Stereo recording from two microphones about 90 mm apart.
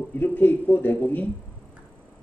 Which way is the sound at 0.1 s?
20° left (ahead or behind).